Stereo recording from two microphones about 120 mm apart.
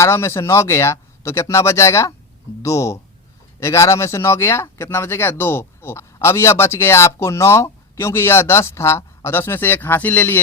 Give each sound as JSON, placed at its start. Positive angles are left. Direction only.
{"t": 0.0, "sound": "speech", "side_deg": 20}